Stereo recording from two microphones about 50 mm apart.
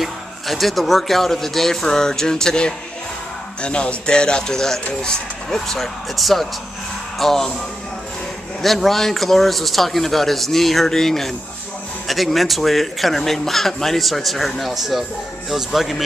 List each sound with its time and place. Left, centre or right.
0.0 s speech: centre
8.6 s speech: centre